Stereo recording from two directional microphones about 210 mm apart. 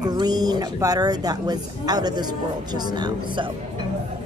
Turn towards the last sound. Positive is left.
turn(degrees=-20)  # may be behind; listen again after turning